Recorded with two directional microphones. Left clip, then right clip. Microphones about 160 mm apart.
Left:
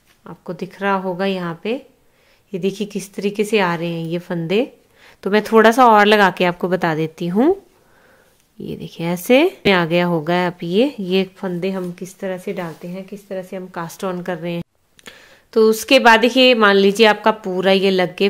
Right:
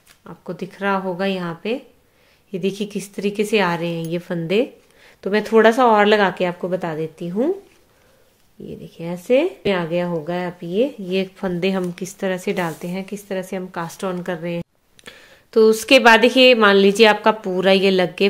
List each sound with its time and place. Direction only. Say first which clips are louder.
0.2 s a woman's voice: left 2 dB; 20° left (ahead or behind); by 7.5 s 45° left (ahead or behind)
8.6 s speech: left 6 dB; 40° left (ahead or behind)
11.3 s a woman's voice: right 2 dB; 5° left (ahead or behind); by 13.7 s 10° right (ahead or behind)
13.7 s a woman's voice: left 1 dB; 10° left (ahead or behind)